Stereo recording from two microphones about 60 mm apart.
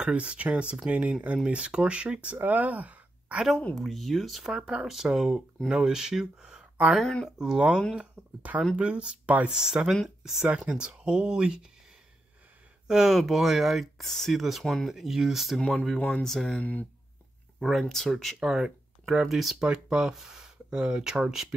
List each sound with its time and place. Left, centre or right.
0.0 s speech: centre
2.4 s a sound: right
3.7 s speech: centre; by 9.5 s right
9.5 s speech: centre
12.8 s speech: centre
16.0 s speech: centre
16.3 s speech: centre
18.4 s speech: centre
19.6 s speech: centre